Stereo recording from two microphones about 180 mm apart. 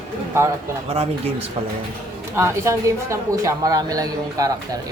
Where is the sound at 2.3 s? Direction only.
15° right (ahead or behind).